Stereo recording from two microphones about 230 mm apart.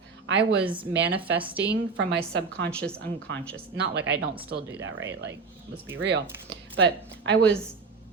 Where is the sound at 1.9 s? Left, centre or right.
Right.